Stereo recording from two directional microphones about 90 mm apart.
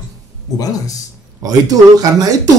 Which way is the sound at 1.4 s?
45° right (ahead or behind).